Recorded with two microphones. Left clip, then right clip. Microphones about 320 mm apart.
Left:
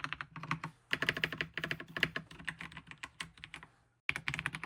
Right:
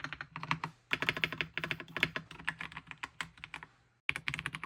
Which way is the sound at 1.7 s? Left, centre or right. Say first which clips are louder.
Right 1 dB; centre.